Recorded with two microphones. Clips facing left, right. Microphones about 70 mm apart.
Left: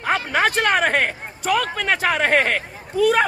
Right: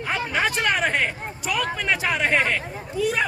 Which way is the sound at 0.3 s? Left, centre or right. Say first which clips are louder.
Left 3 dB; left.